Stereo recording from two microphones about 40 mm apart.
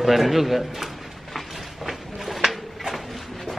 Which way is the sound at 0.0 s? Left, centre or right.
Centre.